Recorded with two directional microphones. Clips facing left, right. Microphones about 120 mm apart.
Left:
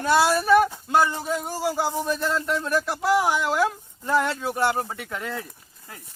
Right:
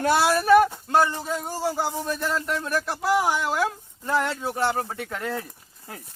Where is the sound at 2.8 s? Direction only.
10° left (ahead or behind).